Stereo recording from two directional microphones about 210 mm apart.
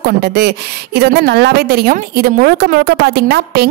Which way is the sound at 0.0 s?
50° right (ahead or behind).